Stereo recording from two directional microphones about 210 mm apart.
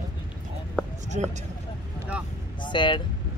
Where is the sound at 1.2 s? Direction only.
35° right (ahead or behind).